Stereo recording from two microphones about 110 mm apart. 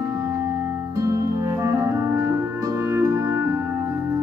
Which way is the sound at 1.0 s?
30° right (ahead or behind).